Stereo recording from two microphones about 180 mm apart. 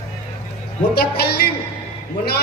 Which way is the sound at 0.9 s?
60° left (ahead or behind).